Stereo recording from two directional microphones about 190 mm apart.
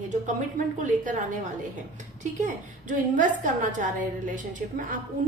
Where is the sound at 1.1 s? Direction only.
40° right (ahead or behind).